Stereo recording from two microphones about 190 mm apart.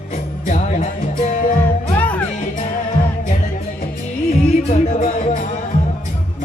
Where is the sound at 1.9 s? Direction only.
10° left (ahead or behind).